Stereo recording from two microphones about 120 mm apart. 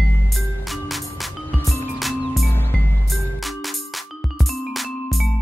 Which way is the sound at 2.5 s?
15° left (ahead or behind).